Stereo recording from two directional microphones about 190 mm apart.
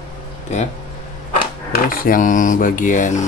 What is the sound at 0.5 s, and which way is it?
Speech, 35° left (ahead or behind).